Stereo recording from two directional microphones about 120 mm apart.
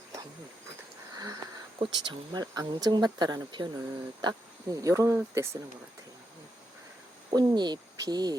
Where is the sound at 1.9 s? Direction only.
40° right (ahead or behind); by 5.6 s 25° right (ahead or behind).